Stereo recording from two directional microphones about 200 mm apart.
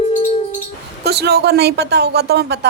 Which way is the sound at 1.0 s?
55° right (ahead or behind).